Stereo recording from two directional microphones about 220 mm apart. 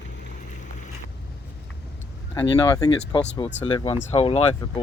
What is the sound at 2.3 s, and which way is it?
Speech, 15° left (ahead or behind).